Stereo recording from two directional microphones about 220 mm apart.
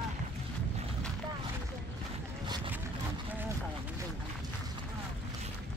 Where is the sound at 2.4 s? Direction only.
20° right (ahead or behind).